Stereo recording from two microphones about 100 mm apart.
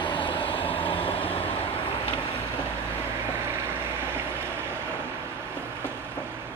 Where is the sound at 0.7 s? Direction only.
65° left (ahead or behind).